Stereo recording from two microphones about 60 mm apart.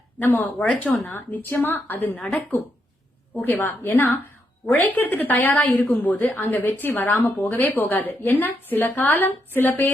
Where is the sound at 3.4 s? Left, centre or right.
Left.